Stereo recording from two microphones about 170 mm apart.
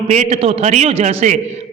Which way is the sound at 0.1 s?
35° right (ahead or behind).